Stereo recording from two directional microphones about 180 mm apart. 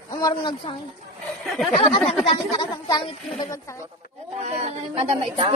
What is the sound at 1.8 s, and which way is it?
Speech, 30° left (ahead or behind).